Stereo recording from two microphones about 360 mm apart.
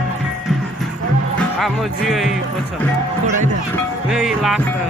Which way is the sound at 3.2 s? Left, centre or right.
Centre.